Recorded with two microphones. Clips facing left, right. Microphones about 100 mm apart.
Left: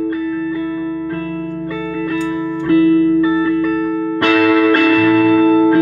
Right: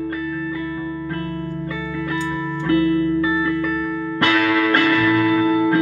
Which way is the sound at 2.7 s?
40° left (ahead or behind).